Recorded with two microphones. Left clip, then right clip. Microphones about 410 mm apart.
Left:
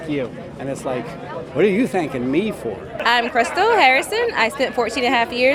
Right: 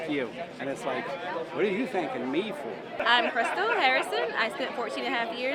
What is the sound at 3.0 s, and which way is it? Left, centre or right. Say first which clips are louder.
A woman's voice: left 7 dB; left.